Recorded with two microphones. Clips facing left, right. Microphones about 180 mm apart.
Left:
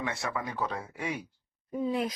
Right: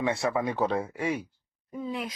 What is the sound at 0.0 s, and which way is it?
Speech, 30° right (ahead or behind).